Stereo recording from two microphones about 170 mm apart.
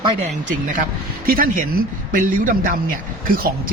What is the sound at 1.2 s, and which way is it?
A man's voice, 55° right (ahead or behind).